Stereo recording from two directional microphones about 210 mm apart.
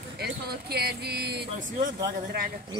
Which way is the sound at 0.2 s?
50° right (ahead or behind).